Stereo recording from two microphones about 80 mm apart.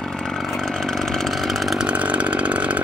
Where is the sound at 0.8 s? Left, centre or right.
Centre.